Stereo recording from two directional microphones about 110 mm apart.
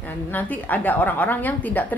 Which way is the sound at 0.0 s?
15° left (ahead or behind).